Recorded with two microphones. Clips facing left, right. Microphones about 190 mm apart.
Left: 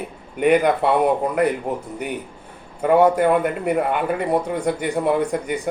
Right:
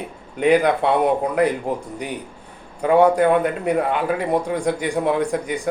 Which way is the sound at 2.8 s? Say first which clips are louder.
Even; 5° left (ahead or behind).